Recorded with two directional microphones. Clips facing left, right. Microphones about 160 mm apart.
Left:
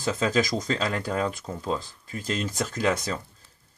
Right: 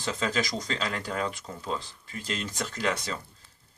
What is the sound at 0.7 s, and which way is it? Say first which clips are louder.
Speech: left 4 dB; 45° left (ahead or behind).